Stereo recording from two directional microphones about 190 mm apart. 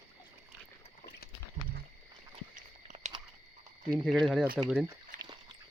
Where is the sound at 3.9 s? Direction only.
Centre (ahead or behind).